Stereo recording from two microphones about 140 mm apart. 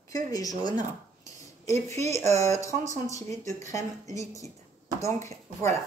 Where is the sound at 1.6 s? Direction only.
20° left (ahead or behind).